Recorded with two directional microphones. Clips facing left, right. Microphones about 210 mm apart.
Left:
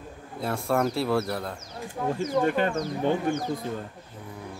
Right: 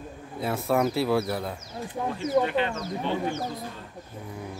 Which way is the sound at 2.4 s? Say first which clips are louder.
Left 2 dB; 45° left (ahead or behind).